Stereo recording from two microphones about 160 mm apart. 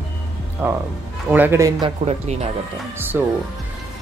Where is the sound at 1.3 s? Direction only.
15° right (ahead or behind).